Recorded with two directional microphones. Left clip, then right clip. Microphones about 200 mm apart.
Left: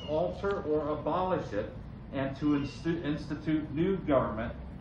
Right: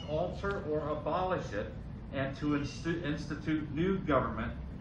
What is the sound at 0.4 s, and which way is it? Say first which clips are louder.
A man's voice: left 4 dB; 45° left (ahead or behind).